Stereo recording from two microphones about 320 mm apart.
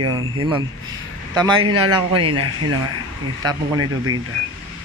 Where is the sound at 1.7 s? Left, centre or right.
Right.